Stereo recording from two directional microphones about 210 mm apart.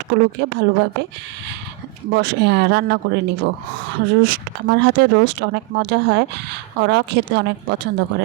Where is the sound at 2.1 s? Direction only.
50° right (ahead or behind).